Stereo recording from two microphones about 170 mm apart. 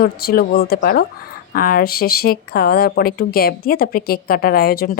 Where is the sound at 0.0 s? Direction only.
60° left (ahead or behind).